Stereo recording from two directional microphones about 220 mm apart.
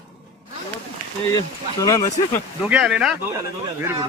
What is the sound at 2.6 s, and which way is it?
Speech, centre (ahead or behind).